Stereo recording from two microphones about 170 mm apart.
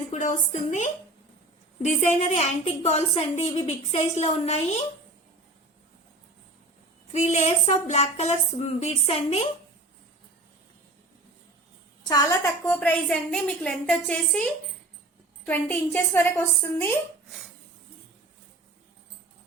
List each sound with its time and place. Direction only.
0.1 s a woman's voice: 45° left (ahead or behind)
7.1 s speech: 40° left (ahead or behind)
12.0 s a woman's voice: 20° left (ahead or behind); by 14.4 s 5° left (ahead or behind)
15.4 s a woman's voice: 10° left (ahead or behind)